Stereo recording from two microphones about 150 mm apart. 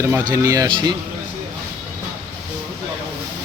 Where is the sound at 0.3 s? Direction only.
20° right (ahead or behind).